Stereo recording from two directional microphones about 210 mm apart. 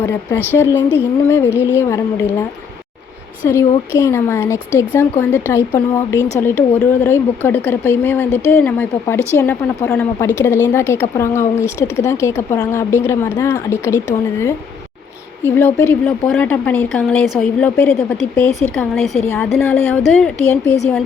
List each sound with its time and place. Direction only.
0.0 s speech: 10° left (ahead or behind)
3.5 s speech: 15° left (ahead or behind)